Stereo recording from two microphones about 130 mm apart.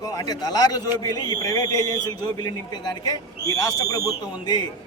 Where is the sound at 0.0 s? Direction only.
30° left (ahead or behind).